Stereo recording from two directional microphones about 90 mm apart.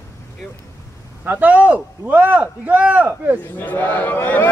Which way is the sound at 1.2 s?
20° right (ahead or behind).